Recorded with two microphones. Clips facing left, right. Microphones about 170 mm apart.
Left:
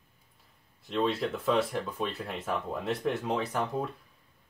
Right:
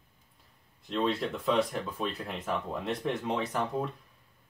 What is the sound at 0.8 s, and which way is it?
Speech, centre (ahead or behind).